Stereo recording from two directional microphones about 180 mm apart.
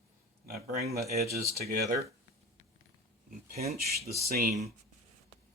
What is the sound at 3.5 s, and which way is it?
Speech, 60° right (ahead or behind).